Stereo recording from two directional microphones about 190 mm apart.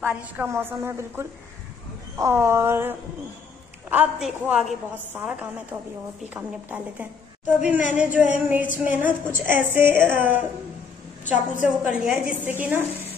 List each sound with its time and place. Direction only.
0.0 s a woman's voice: 10° right (ahead or behind)